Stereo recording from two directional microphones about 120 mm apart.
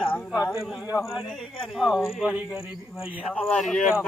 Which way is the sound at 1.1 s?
Centre (ahead or behind).